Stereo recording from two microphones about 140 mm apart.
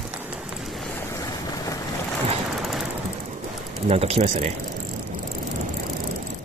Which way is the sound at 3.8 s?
45° right (ahead or behind).